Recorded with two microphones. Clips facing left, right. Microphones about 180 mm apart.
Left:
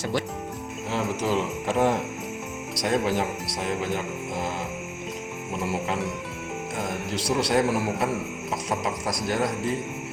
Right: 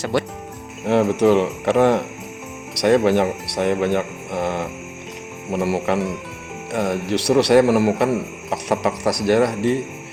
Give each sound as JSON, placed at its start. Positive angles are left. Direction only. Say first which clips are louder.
{"t": 0.0, "sound": "a man's voice", "louder": "right 5 dB", "side_deg": -70}